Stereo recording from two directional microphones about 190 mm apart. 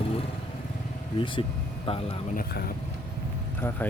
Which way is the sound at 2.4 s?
55° left (ahead or behind).